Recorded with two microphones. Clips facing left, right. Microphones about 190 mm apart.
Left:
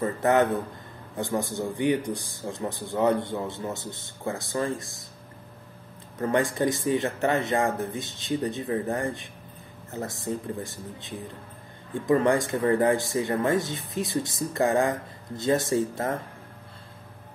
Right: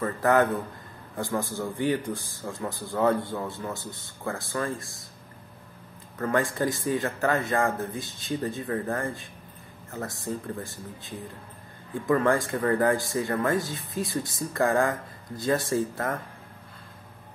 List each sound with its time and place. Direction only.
0.0 s speech: 20° left (ahead or behind)
6.1 s speech: 20° left (ahead or behind)
10.2 s speech: 25° left (ahead or behind)